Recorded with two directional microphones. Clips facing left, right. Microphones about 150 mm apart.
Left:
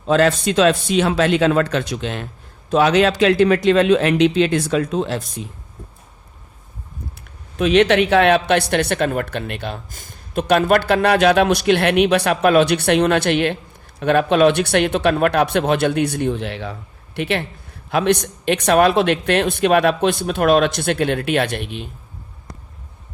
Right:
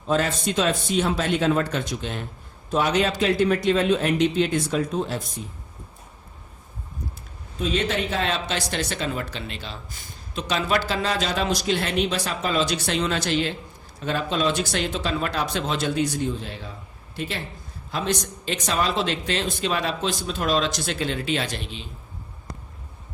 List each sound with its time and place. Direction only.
0.1 s a man's voice: 80° left
7.6 s speech: 75° left (ahead or behind); by 21.8 s 60° left (ahead or behind)